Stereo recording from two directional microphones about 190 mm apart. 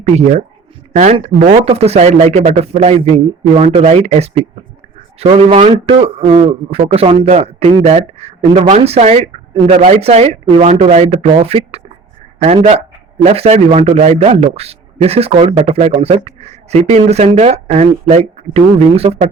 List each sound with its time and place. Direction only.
0.2 s a man's voice: 35° right (ahead or behind)